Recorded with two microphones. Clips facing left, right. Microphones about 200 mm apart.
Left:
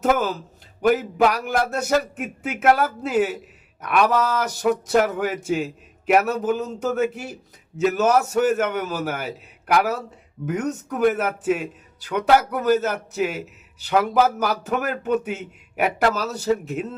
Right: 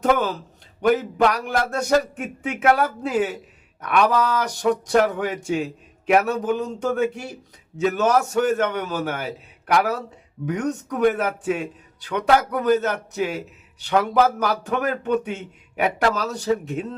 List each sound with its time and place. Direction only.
0.0 s a man's voice: 5° left (ahead or behind)